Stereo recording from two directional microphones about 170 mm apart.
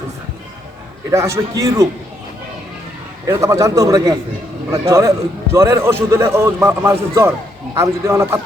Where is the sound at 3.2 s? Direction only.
20° right (ahead or behind).